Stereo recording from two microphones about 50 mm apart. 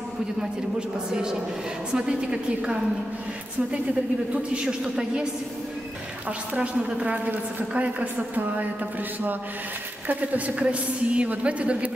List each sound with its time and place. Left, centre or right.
0.4 s a man's voice: centre
4.3 s a woman's voice: right
10.0 s a woman's voice: right